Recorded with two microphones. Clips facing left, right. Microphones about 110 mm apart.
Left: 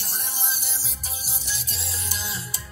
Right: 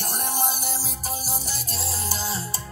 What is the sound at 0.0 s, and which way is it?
Music, 50° right (ahead or behind).